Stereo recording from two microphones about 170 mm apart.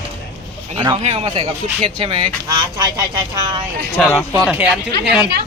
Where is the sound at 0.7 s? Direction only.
30° right (ahead or behind).